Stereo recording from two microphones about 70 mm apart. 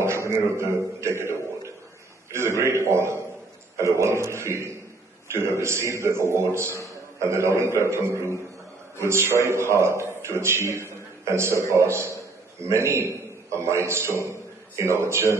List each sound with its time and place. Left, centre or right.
0.0 s a man's voice: right
1.0 s a sound: right
2.3 s a man's voice: right